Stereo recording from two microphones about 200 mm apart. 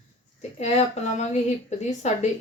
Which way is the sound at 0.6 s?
35° left (ahead or behind).